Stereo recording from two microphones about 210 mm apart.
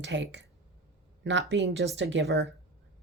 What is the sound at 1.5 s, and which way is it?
Speech, 55° right (ahead or behind).